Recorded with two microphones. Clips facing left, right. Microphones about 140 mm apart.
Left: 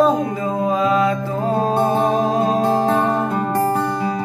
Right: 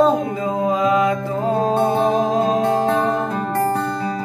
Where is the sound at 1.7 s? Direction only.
15° left (ahead or behind).